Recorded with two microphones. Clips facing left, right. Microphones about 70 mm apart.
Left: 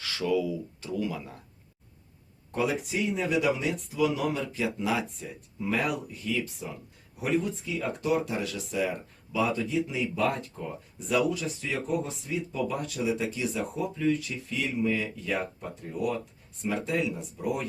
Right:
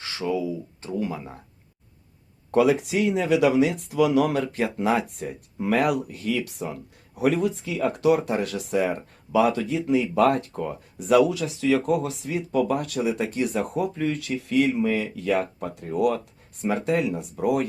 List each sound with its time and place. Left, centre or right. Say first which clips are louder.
0.0 s speech: right 1 dB; right
2.5 s speech: right 9 dB; right
5.6 s speech: right 7 dB; right
7.2 s speech: right 6 dB; right